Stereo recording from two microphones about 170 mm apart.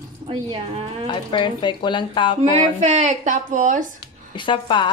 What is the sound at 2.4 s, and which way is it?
A woman's voice, 45° right (ahead or behind).